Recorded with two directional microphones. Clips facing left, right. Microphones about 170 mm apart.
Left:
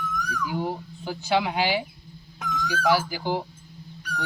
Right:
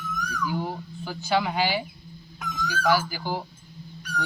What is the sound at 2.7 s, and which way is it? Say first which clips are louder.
Speech: left 1 dB; 25° left (ahead or behind).